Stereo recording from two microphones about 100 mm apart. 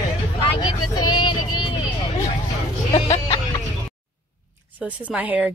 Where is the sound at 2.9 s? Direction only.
70° left (ahead or behind).